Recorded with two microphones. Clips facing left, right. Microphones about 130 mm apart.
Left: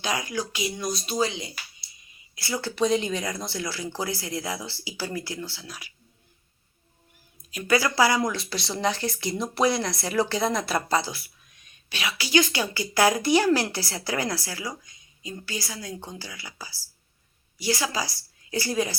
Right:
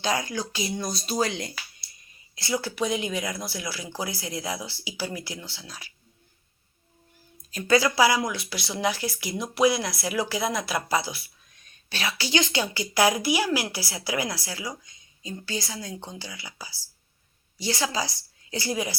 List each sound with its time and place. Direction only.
0.0 s speech: 30° right (ahead or behind); by 1.5 s 50° right (ahead or behind)
2.3 s a woman's voice: 20° right (ahead or behind)
7.5 s a woman's voice: 25° right (ahead or behind)
7.9 s a woman's voice: 15° right (ahead or behind)
8.2 s a woman's voice: centre (ahead or behind)
11.9 s a woman's voice: 30° right (ahead or behind); by 18.9 s 15° right (ahead or behind)